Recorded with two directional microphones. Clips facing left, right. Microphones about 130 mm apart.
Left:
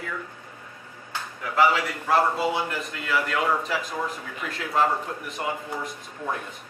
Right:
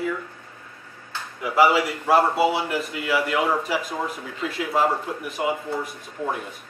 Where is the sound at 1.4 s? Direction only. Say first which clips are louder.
Right 3 dB; 10° right (ahead or behind).